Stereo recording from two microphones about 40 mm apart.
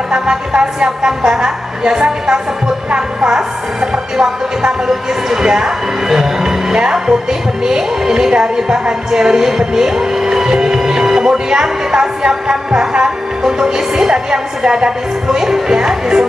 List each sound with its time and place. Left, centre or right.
0.1 s a woman's voice: centre